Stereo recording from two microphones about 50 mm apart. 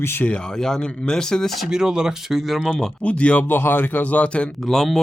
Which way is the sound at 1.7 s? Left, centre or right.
Centre.